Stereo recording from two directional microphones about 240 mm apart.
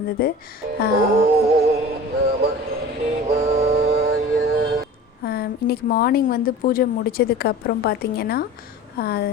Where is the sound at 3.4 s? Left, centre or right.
Right.